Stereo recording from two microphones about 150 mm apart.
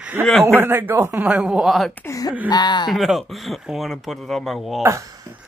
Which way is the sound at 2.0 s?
20° left (ahead or behind).